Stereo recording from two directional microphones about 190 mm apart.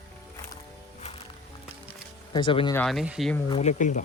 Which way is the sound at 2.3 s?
25° left (ahead or behind).